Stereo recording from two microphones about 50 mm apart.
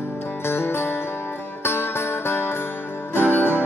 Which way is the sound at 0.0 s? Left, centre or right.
Left.